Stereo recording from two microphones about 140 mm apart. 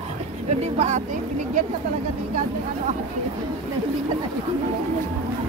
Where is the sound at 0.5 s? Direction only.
50° right (ahead or behind).